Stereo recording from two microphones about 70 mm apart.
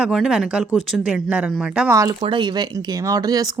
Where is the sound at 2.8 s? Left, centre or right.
Right.